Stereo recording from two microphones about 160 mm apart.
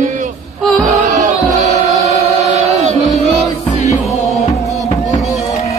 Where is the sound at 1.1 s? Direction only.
50° right (ahead or behind).